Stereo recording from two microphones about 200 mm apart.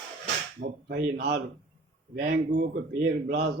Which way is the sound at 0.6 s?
45° right (ahead or behind).